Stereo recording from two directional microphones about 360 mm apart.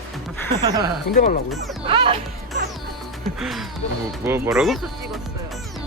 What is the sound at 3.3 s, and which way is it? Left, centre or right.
Music, centre.